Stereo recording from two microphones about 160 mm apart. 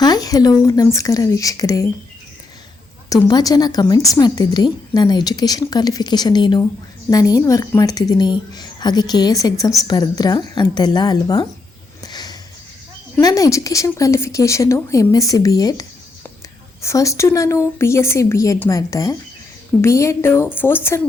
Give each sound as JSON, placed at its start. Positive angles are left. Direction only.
{"t": 0.0, "sound": "a woman's voice", "side_deg": 25}
{"t": 3.1, "sound": "a woman's voice", "side_deg": 25}
{"t": 12.0, "sound": "a sound", "side_deg": 25}
{"t": 13.1, "sound": "a woman's voice", "side_deg": 20}